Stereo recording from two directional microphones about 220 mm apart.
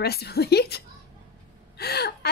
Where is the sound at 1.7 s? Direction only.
45° left (ahead or behind).